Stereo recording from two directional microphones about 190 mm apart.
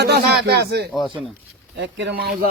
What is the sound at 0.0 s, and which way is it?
Speech, 60° right (ahead or behind).